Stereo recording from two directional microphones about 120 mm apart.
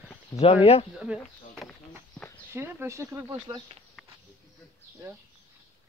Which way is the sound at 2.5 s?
20° right (ahead or behind).